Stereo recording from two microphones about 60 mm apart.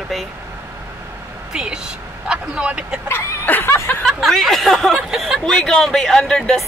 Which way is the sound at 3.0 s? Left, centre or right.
Left.